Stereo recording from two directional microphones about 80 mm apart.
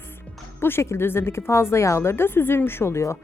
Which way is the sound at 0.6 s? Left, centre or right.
Left.